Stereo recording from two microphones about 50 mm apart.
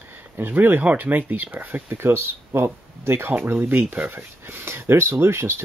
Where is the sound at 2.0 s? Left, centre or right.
Right.